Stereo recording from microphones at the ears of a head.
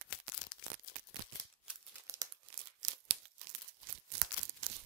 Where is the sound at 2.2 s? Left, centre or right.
Right.